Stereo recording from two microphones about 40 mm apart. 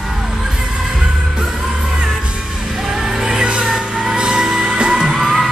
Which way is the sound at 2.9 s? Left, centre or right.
Centre.